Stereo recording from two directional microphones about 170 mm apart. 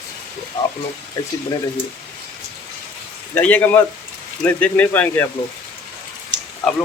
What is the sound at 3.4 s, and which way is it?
Speech, 10° left (ahead or behind).